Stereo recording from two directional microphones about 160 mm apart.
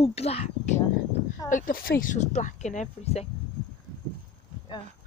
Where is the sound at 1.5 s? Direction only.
60° left (ahead or behind); by 3.3 s 40° left (ahead or behind).